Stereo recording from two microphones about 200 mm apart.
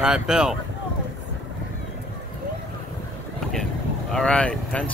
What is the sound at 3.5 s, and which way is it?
Vehicle, centre (ahead or behind).